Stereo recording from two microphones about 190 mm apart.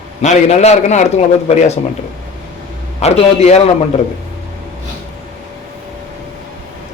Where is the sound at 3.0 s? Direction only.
35° left (ahead or behind).